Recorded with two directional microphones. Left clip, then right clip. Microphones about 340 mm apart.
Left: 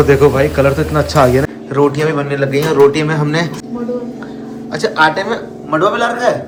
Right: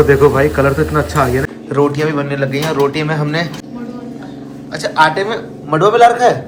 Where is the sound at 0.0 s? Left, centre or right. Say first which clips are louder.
Even; centre.